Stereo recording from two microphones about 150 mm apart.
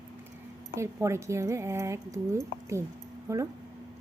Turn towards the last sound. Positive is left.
turn(degrees=-20)  # may be behind; listen again after turning